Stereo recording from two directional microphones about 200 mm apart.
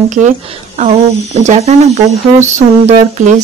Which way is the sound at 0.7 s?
35° right (ahead or behind).